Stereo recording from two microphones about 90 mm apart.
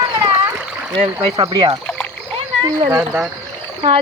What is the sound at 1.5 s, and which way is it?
Speech, 55° right (ahead or behind).